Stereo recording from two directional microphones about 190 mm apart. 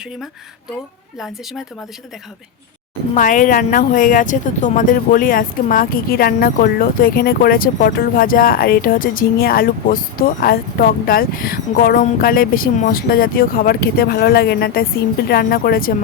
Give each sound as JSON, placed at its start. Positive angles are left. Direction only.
{"t": 3.2, "sound": "speech", "side_deg": 45}